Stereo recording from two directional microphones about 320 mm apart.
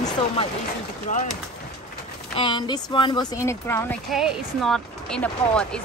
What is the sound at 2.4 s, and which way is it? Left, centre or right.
Speech, centre.